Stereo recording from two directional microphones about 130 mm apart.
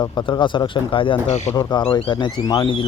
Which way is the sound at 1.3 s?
55° left (ahead or behind).